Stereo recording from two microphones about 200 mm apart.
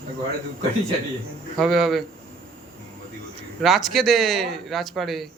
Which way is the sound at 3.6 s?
Centre (ahead or behind).